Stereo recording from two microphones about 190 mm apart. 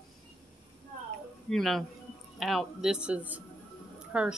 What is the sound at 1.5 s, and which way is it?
Speech, centre (ahead or behind).